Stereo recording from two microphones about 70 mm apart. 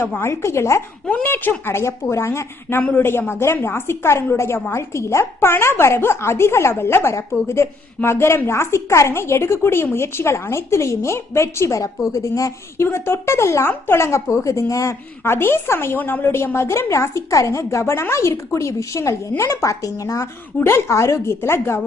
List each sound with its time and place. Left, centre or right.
0.2 s a woman's voice: left
1.0 s a woman's voice: left
12.7 s a woman's voice: left
15.2 s a woman's voice: left
20.6 s a woman's voice: left